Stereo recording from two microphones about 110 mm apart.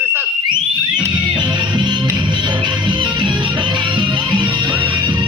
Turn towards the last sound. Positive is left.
turn(degrees=-45)  # may be behind; listen again after turning